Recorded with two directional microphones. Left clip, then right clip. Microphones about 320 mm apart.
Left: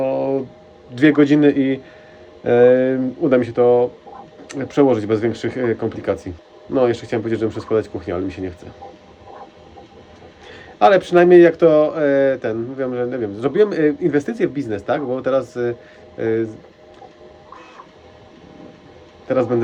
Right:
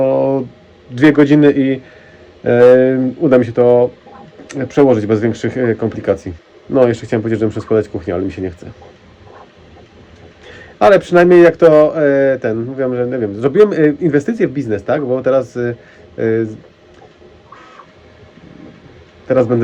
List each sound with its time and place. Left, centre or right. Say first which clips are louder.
0.0 s a sound: right 6 dB; centre
0.9 s speech: right 4 dB; centre
10.4 s speech: right 3 dB; centre
19.3 s speech: right 6 dB; centre